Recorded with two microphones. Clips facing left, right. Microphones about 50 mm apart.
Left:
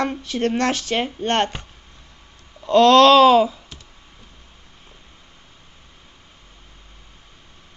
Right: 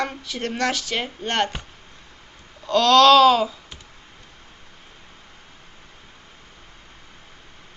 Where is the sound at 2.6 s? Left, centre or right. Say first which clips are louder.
Left 3 dB; left.